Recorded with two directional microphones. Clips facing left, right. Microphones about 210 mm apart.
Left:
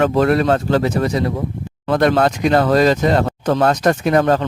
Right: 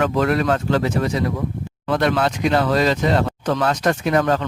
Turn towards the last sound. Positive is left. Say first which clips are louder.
# left 4 dB
turn(degrees=35)  # may be behind; listen again after turning